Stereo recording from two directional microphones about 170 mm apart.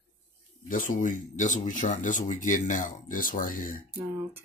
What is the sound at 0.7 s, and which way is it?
Speech, 50° left (ahead or behind).